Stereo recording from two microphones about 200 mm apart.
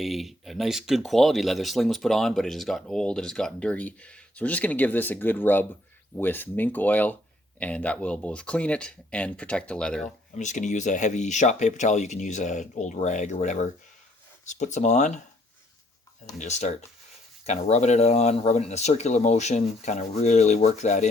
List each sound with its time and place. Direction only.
0.0 s speech: centre (ahead or behind)
10.3 s speech: 40° left (ahead or behind)
16.4 s speech: 35° left (ahead or behind)